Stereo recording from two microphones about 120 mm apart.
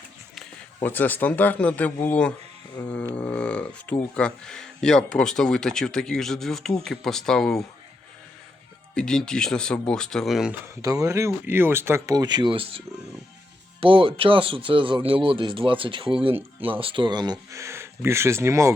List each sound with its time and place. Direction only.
0.8 s speech: 15° left (ahead or behind)
9.0 s speech: 5° left (ahead or behind)
10.8 s speech: 30° right (ahead or behind); by 12.8 s 45° right (ahead or behind)
13.8 s speech: 50° right (ahead or behind); by 18.7 s 25° right (ahead or behind)